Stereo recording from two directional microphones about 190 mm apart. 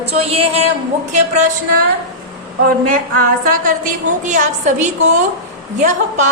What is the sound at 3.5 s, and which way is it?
A woman's voice, 45° right (ahead or behind).